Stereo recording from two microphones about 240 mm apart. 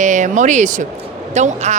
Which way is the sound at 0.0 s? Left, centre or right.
Right.